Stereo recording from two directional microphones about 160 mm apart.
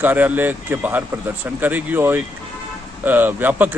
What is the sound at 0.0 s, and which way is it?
A man's voice, 10° right (ahead or behind).